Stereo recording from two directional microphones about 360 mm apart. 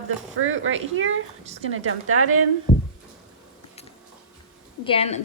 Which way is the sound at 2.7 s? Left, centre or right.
Centre.